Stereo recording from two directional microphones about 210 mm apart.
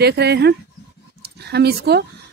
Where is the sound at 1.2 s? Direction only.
50° right (ahead or behind).